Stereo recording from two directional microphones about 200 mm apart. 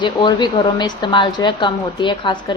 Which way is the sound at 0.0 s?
20° left (ahead or behind).